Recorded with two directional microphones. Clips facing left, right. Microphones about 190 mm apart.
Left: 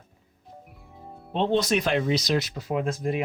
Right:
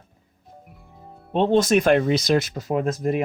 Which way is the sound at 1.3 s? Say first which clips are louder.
Right 5 dB; 45° right (ahead or behind).